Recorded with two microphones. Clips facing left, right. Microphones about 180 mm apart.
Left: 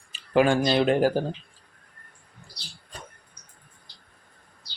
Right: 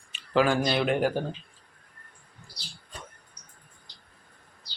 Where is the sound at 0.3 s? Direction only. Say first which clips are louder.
Left 3 dB; 25° left (ahead or behind).